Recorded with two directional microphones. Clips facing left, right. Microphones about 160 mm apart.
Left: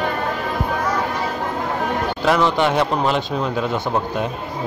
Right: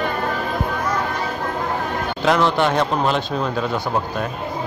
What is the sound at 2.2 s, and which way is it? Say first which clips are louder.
A man's voice: even; 10° left (ahead or behind).